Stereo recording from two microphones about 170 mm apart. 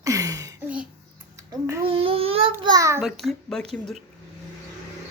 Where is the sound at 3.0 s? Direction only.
Centre (ahead or behind).